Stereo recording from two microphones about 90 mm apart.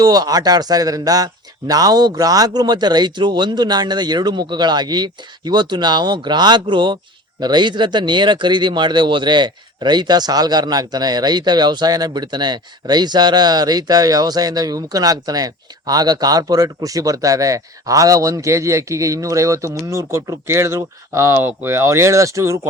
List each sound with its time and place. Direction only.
0.0 s speech: 45° right (ahead or behind)